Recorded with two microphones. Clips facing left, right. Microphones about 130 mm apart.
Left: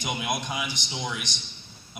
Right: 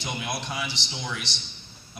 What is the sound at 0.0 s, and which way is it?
A man's voice, 15° left (ahead or behind).